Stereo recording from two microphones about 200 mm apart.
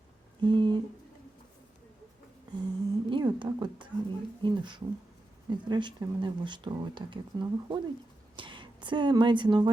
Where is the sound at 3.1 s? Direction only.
25° right (ahead or behind).